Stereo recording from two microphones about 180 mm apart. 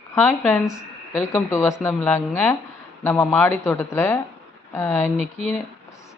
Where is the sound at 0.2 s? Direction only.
10° left (ahead or behind).